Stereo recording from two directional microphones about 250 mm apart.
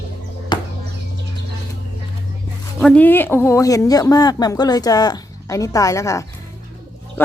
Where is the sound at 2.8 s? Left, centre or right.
Centre.